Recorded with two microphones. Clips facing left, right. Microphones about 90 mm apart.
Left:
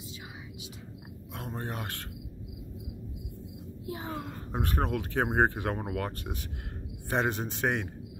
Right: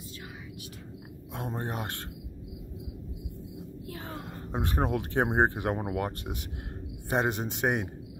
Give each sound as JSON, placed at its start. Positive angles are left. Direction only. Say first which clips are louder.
{"t": 1.3, "sound": "speech", "louder": "right 3 dB", "side_deg": -20}
{"t": 3.8, "sound": "speech", "louder": "left 6 dB", "side_deg": 20}
{"t": 4.5, "sound": "a man's voice", "louder": "right 2 dB", "side_deg": -20}